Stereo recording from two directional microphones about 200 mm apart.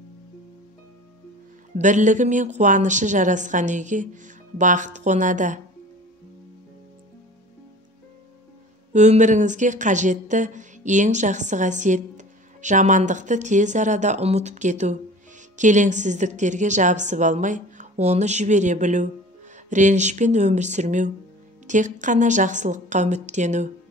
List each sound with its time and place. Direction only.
1.8 s a woman's voice: 40° right (ahead or behind)
8.9 s a woman's voice: 35° right (ahead or behind)